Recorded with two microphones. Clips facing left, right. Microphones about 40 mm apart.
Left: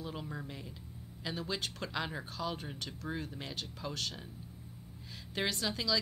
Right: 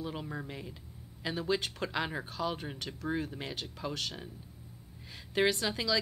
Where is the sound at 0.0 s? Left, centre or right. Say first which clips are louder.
Right 3 dB; centre.